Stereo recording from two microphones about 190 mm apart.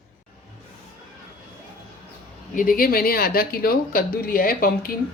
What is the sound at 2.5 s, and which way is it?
A woman's voice, 45° left (ahead or behind).